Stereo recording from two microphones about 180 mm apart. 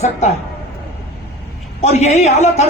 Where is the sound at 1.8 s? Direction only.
40° left (ahead or behind).